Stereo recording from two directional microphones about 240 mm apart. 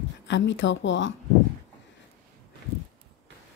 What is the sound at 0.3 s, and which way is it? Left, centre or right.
Speech, left.